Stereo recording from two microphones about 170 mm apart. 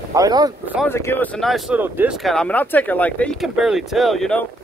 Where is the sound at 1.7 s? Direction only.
10° right (ahead or behind).